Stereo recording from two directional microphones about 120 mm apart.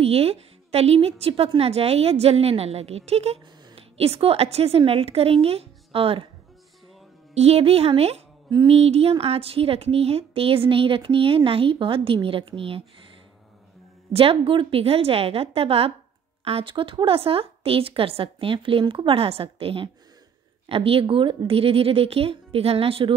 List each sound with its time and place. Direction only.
0.0 s a woman's voice: 55° right (ahead or behind)
7.3 s a woman's voice: 55° right (ahead or behind)
8.5 s a sound: 40° right (ahead or behind)
8.7 s a woman's voice: 60° right (ahead or behind)
14.1 s a woman's voice: 50° right (ahead or behind)